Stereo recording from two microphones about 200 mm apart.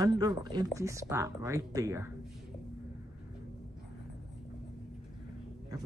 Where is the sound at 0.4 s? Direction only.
20° right (ahead or behind).